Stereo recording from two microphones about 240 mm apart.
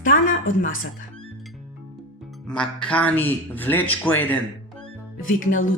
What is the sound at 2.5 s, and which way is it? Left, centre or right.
Speech, centre.